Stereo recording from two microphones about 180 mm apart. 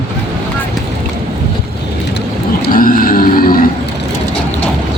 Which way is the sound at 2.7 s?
50° left (ahead or behind).